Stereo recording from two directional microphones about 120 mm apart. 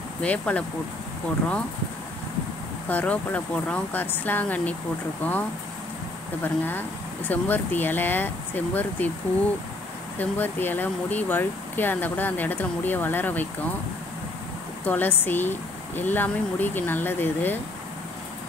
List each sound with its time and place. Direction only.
0.2 s speech: 10° left (ahead or behind)
2.9 s speech: 15° left (ahead or behind)
6.4 s speech: 15° left (ahead or behind)
10.1 s speech: 15° left (ahead or behind)
14.9 s speech: 15° left (ahead or behind)